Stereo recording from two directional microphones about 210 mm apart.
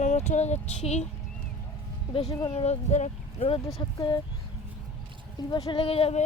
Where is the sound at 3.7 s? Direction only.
20° left (ahead or behind).